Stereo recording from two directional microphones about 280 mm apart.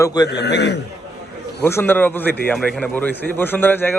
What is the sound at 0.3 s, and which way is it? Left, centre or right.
Speech, left.